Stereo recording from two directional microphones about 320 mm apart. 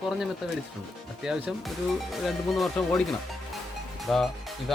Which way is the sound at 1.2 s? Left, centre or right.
Centre.